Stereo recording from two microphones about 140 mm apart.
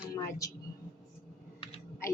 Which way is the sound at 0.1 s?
25° left (ahead or behind).